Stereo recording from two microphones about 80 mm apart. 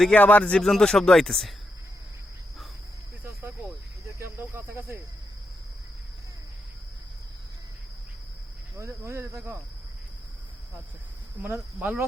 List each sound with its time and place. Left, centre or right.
0.1 s speech: centre
0.6 s speech: centre
4.2 s speech: right
8.7 s speech: right
11.5 s speech: centre